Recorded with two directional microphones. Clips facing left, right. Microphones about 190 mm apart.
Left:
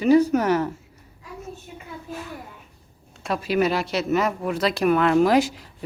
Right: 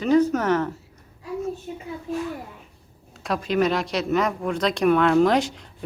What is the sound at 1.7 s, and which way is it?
Speech, 40° right (ahead or behind).